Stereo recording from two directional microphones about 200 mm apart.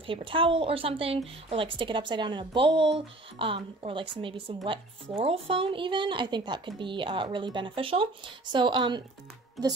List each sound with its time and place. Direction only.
0.0 s speech: 25° right (ahead or behind)